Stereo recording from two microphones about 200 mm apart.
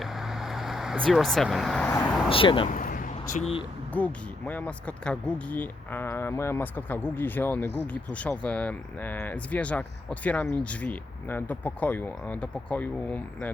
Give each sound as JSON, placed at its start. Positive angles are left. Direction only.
{"t": 0.0, "sound": "vehicle", "side_deg": 0}
{"t": 2.3, "sound": "speech", "side_deg": 25}
{"t": 2.6, "sound": "a sound", "side_deg": 40}
{"t": 3.9, "sound": "speech", "side_deg": 10}